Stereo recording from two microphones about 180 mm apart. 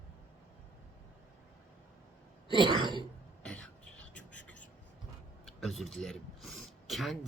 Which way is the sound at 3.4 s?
5° left (ahead or behind).